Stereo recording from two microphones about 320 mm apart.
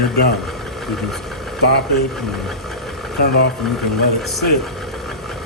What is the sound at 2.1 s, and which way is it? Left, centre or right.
Speech, centre.